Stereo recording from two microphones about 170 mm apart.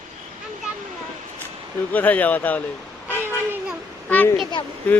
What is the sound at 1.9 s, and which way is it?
Speech, 10° left (ahead or behind).